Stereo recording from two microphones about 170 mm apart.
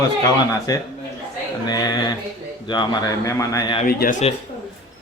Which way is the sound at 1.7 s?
25° left (ahead or behind).